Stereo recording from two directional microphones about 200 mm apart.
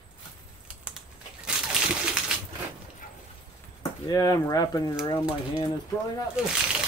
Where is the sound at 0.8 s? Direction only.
5° right (ahead or behind).